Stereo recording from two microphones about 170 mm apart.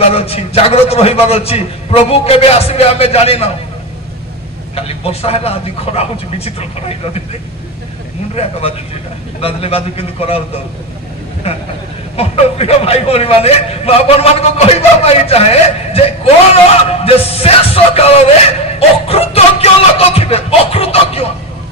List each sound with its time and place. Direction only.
0.1 s a man's voice: 35° left (ahead or behind)
4.7 s a man's voice: 35° left (ahead or behind)
8.4 s a man's voice: 35° left (ahead or behind)
11.4 s a man's voice: 35° left (ahead or behind)